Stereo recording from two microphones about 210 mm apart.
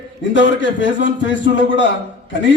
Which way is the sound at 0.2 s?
60° left (ahead or behind).